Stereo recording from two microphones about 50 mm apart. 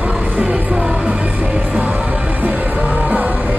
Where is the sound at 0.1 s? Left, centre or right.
Centre.